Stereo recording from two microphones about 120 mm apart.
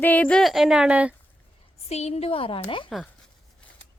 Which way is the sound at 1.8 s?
60° left (ahead or behind).